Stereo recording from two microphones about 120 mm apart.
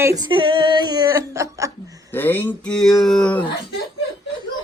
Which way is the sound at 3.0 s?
5° left (ahead or behind).